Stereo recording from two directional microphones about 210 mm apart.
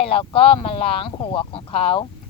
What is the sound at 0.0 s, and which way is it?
Speech, 25° left (ahead or behind).